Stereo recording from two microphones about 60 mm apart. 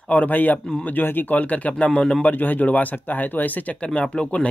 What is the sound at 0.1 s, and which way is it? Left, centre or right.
Speech, left.